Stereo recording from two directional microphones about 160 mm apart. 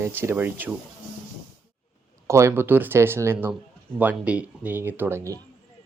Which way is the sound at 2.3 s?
20° right (ahead or behind).